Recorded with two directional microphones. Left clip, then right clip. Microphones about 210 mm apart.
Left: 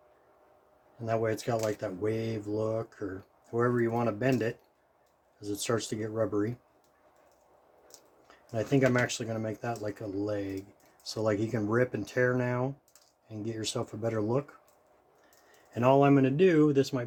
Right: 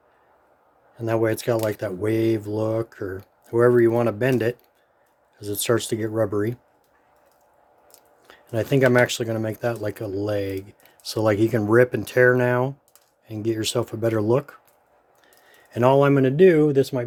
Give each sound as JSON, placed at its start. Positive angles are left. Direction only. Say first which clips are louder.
{"t": 1.0, "sound": "speech", "louder": "right 8 dB", "side_deg": -45}
{"t": 8.3, "sound": "speech", "louder": "right 7 dB", "side_deg": -45}
{"t": 15.7, "sound": "speech", "louder": "right 6 dB", "side_deg": -45}